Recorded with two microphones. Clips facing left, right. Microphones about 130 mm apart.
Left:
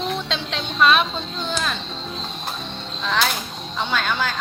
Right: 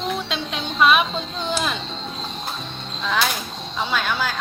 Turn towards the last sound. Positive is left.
turn(degrees=-5)  # may be behind; listen again after turning